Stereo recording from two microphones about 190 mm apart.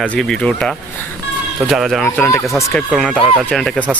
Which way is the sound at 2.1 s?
15° left (ahead or behind).